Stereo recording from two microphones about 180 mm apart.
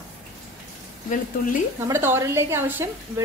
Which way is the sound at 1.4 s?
50° left (ahead or behind).